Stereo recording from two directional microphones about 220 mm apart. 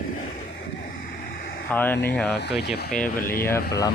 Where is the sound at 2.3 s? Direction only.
50° left (ahead or behind).